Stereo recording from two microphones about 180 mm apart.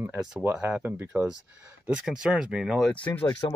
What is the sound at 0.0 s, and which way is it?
Speech, 10° right (ahead or behind).